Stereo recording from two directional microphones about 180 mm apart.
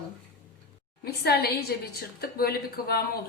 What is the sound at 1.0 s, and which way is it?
Speech, 60° left (ahead or behind).